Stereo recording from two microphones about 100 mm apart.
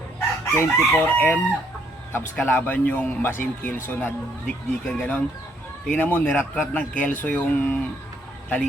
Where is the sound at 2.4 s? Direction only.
20° left (ahead or behind).